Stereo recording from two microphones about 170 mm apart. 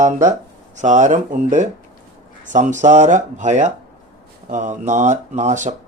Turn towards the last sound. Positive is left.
turn(degrees=-45)  # may be behind; listen again after turning